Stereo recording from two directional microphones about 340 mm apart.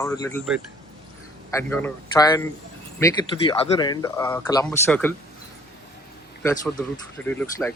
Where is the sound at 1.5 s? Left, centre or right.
Centre.